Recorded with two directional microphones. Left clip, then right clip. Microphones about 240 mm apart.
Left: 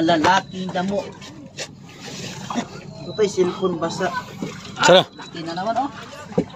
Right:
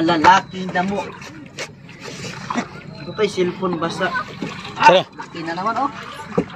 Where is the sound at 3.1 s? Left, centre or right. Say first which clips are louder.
Even; right.